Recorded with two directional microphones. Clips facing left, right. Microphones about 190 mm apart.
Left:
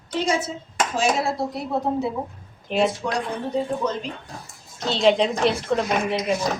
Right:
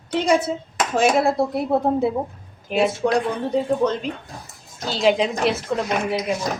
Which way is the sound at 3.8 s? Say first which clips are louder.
Right 5 dB; 65° right (ahead or behind).